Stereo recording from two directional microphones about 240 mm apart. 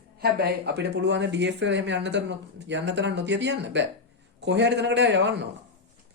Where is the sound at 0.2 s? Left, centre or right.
Right.